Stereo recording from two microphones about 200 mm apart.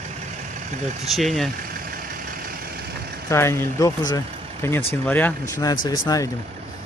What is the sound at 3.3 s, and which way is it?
Speech, 10° left (ahead or behind).